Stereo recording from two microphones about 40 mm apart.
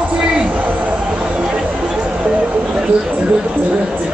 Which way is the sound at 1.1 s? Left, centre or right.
Right.